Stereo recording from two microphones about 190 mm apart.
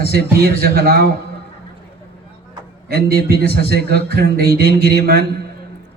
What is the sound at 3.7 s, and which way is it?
Speech, 65° left (ahead or behind).